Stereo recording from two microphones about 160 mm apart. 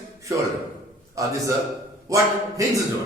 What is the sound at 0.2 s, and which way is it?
A man's voice, 20° right (ahead or behind).